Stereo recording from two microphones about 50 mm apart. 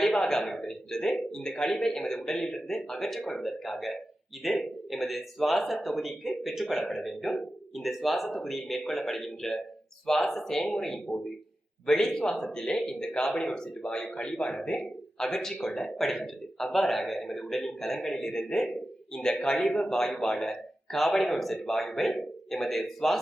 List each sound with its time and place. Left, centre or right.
0.2 s a man's voice: centre